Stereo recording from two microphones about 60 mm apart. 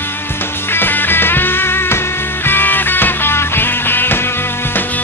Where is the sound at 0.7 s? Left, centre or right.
Left.